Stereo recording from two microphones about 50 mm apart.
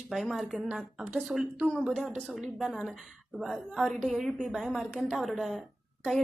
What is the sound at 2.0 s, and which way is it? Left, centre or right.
Speech, right.